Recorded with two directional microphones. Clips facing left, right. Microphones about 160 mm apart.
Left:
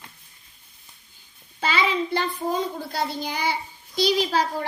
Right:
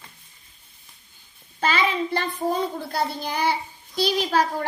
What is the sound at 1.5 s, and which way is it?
Speech, 50° right (ahead or behind).